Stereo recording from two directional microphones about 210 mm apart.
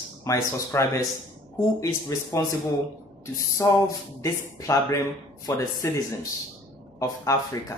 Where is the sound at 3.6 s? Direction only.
10° left (ahead or behind).